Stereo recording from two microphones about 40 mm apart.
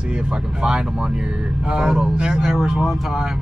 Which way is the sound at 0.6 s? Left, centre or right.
Right.